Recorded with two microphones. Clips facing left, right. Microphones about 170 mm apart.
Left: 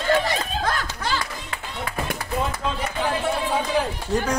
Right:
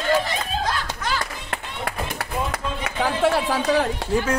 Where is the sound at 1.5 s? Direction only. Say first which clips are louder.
Right 1 dB; 70° right (ahead or behind).